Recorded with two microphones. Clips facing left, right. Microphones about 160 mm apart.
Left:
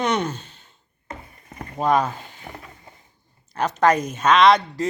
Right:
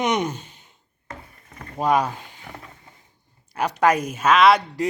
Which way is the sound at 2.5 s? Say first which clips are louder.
Left 1 dB; 25° left (ahead or behind).